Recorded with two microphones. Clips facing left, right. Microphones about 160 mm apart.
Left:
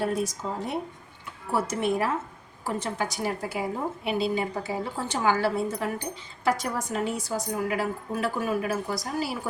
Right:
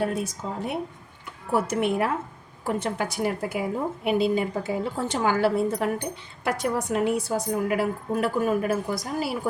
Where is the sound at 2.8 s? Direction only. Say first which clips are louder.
Right 2 dB; 60° right (ahead or behind).